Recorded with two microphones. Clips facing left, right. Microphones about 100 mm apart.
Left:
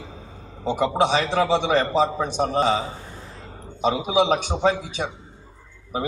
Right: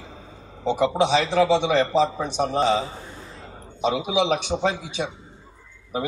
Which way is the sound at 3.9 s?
45° left (ahead or behind).